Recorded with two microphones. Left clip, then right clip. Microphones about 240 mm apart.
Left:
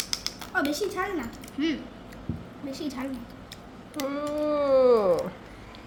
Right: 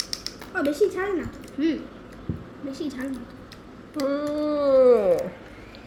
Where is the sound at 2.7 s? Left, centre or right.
Left.